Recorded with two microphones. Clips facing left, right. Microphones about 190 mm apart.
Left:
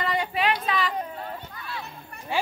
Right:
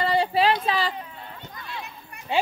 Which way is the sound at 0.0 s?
30° right (ahead or behind).